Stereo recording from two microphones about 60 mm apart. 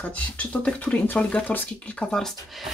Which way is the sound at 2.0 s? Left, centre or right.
Centre.